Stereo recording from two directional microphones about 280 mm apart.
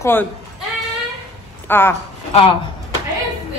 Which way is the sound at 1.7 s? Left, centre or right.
Centre.